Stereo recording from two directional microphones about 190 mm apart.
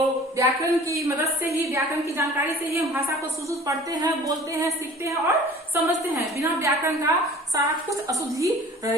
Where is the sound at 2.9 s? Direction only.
15° right (ahead or behind).